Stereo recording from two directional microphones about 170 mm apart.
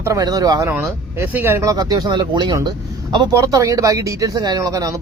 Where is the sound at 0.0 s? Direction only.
20° right (ahead or behind).